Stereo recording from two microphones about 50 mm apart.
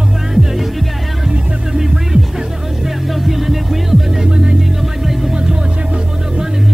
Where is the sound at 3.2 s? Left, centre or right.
Centre.